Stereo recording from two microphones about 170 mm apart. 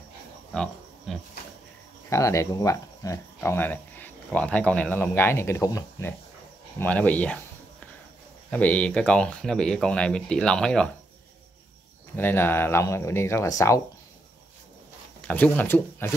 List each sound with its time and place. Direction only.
0.5 s pig: 5° left (ahead or behind)
2.0 s speech: 20° left (ahead or behind)
8.5 s speech: 10° left (ahead or behind)
12.2 s speech: 10° left (ahead or behind)
15.2 s speech: 10° left (ahead or behind)